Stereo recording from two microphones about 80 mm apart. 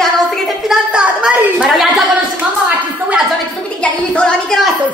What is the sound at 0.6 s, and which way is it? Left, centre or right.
A woman's voice, centre.